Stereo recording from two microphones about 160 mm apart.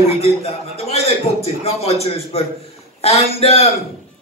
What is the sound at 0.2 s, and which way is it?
A man's voice, 40° left (ahead or behind).